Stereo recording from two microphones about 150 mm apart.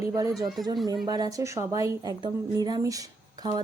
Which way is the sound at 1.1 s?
25° right (ahead or behind).